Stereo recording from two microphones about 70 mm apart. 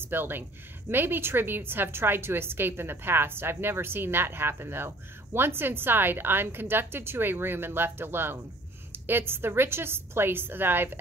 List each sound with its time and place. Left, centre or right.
0.0 s a woman's voice: right